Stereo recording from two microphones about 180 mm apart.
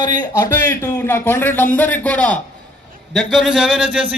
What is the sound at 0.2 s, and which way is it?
A man's voice, 20° left (ahead or behind).